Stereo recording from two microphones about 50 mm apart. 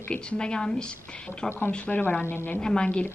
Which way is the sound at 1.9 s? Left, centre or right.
Left.